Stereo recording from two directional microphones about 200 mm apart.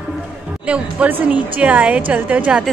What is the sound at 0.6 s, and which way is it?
A woman's voice, 5° right (ahead or behind).